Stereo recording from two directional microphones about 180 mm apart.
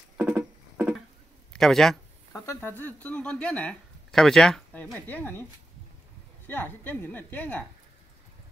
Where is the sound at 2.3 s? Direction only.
15° left (ahead or behind).